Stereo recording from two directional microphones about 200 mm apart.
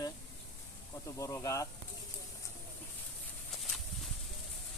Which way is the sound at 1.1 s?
15° left (ahead or behind).